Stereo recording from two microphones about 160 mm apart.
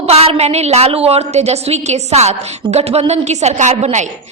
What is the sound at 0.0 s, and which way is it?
A woman's voice, 40° right (ahead or behind).